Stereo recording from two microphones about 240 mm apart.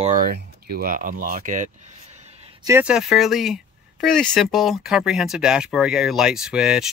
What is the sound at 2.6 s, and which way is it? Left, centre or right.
Speech, centre.